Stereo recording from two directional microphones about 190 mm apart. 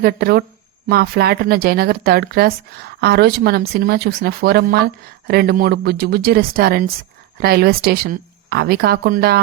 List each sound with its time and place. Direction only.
0.0 s speech: 55° right (ahead or behind)